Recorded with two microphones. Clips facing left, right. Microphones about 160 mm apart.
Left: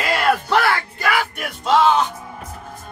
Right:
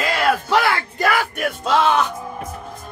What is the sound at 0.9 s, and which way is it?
Speech, 45° right (ahead or behind).